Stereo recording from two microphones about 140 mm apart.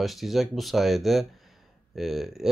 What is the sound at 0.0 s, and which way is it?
Speech, centre (ahead or behind).